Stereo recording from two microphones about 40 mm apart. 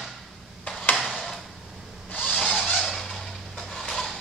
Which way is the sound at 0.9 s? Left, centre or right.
Centre.